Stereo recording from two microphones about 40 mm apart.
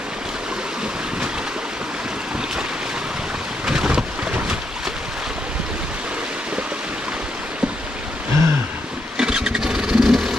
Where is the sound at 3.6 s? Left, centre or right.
Right.